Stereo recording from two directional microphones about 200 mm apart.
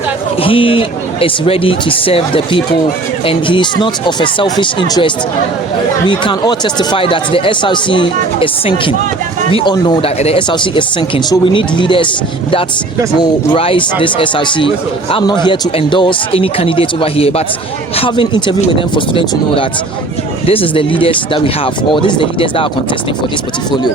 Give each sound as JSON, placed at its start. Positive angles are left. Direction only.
{"t": 0.4, "sound": "speech", "side_deg": 25}